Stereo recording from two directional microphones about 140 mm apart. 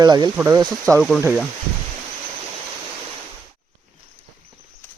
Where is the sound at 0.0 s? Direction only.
30° right (ahead or behind).